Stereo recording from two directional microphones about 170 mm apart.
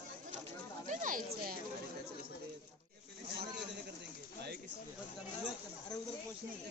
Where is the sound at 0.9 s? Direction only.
50° right (ahead or behind).